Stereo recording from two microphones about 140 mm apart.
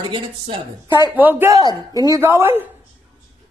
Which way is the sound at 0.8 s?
30° left (ahead or behind).